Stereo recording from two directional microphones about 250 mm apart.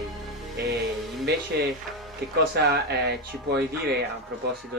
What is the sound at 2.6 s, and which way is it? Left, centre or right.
Speech, right.